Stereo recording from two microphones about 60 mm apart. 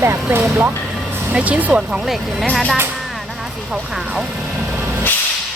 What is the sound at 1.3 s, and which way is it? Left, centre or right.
Speech, right.